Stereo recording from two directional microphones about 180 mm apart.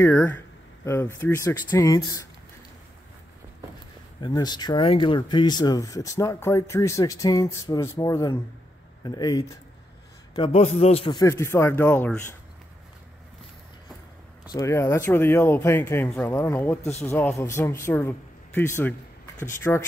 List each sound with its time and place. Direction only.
0.0 s speech: 10° left (ahead or behind)
4.2 s a man's voice: 25° left (ahead or behind)
11.2 s speech: 15° left (ahead or behind)
14.5 s speech: 15° left (ahead or behind)